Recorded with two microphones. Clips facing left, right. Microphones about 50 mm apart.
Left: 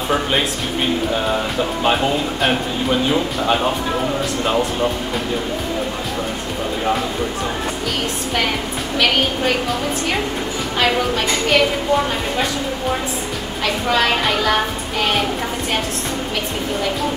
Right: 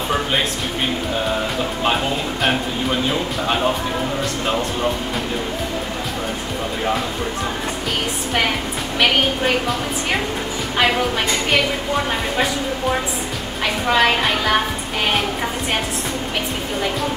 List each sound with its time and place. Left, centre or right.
13.9 s a woman's voice: centre